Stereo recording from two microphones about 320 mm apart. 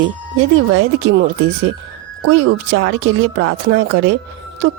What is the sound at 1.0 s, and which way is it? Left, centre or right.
Speech, right.